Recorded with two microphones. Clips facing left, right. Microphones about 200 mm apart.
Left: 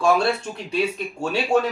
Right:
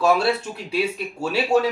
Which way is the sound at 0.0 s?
5° right (ahead or behind).